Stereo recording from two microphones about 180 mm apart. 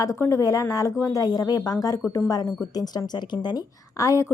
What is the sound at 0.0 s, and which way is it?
A woman's voice, 15° left (ahead or behind).